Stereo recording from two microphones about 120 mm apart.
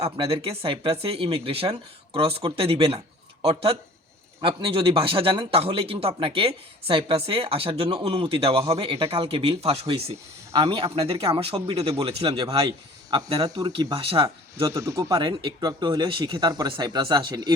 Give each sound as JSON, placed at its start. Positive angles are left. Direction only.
{"t": 0.0, "sound": "speech", "side_deg": -50}
{"t": 14.7, "sound": "speech", "side_deg": -25}